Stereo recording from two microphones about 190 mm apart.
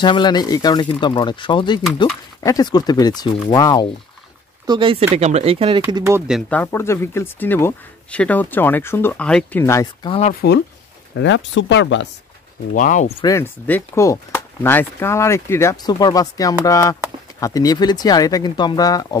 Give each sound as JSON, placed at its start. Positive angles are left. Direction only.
{"t": 0.0, "sound": "speech", "side_deg": 25}
{"t": 4.6, "sound": "speech", "side_deg": -25}
{"t": 6.5, "sound": "speech", "side_deg": 10}
{"t": 10.0, "sound": "speech", "side_deg": 30}
{"t": 11.1, "sound": "speech", "side_deg": 75}
{"t": 12.7, "sound": "speech", "side_deg": 40}
{"t": 13.2, "sound": "speech", "side_deg": 15}